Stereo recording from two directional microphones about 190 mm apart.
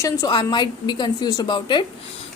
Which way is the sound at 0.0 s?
20° left (ahead or behind).